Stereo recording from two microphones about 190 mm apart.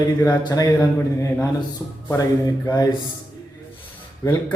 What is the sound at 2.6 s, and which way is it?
Speech, 20° left (ahead or behind).